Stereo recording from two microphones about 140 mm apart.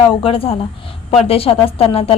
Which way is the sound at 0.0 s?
40° left (ahead or behind).